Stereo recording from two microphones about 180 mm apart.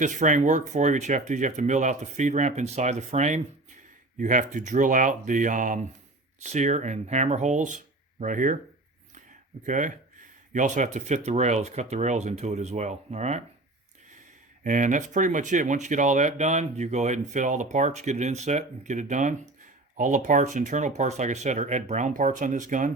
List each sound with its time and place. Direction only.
0.0 s speech: 45° right (ahead or behind)
9.6 s speech: 45° right (ahead or behind)
14.6 s speech: 45° right (ahead or behind)